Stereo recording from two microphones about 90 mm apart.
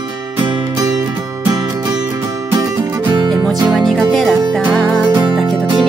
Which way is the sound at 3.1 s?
55° right (ahead or behind).